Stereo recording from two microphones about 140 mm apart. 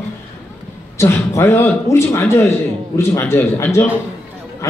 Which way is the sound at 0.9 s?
20° left (ahead or behind).